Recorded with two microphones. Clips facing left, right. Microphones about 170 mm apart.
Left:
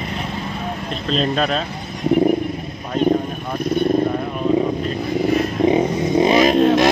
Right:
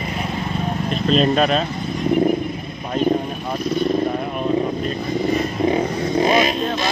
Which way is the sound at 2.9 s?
5° right (ahead or behind).